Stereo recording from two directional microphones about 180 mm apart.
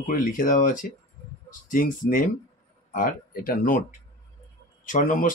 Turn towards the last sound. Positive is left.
turn(degrees=50)  # may be behind; listen again after turning